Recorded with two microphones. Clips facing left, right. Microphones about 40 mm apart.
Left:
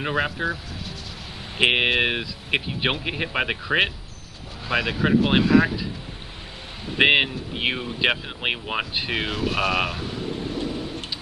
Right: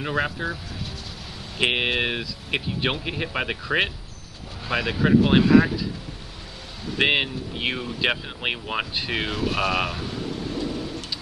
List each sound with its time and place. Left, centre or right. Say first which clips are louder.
0.0 s speech: left 1 dB; centre
1.6 s speech: left 3 dB; centre
4.6 s speech: even; centre
6.9 s speech: left 3 dB; centre
10.2 s vehicle: left 3 dB; left
10.6 s thunder: even; left